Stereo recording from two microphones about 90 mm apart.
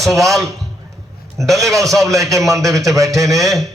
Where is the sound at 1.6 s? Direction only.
35° right (ahead or behind).